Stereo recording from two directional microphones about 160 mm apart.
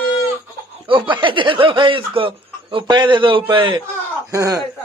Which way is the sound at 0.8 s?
30° right (ahead or behind).